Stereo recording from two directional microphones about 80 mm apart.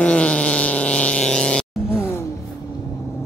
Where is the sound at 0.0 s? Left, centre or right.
Centre.